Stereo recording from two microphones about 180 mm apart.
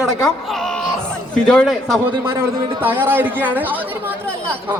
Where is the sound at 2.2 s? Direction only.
15° right (ahead or behind).